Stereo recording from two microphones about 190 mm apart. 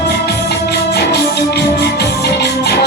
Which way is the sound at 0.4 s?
60° left (ahead or behind).